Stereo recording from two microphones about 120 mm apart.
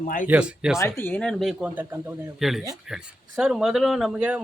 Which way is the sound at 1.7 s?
15° right (ahead or behind).